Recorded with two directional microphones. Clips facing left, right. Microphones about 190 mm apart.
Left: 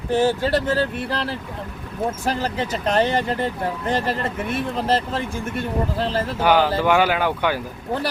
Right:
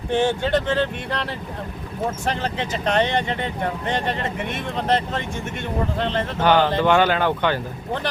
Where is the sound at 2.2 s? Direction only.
40° left (ahead or behind).